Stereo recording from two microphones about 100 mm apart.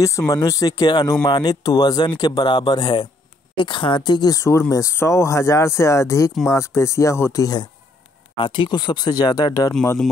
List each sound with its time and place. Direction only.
0.3 s speech: 35° left (ahead or behind)
8.4 s speech: 55° left (ahead or behind)